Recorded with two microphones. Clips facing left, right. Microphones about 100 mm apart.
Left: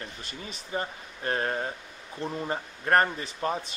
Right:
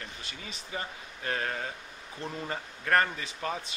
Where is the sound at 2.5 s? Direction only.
30° left (ahead or behind).